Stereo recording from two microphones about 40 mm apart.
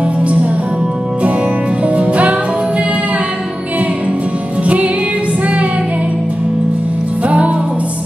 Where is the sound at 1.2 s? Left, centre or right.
Right.